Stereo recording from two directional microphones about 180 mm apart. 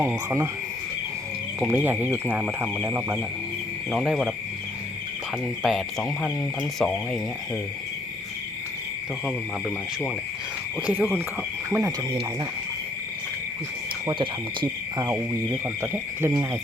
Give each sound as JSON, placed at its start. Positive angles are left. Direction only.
{"t": 0.0, "sound": "speech", "side_deg": -15}
{"t": 1.5, "sound": "speech", "side_deg": -10}
{"t": 5.6, "sound": "speech", "side_deg": 0}
{"t": 10.8, "sound": "speech", "side_deg": -10}
{"t": 14.1, "sound": "speech", "side_deg": -25}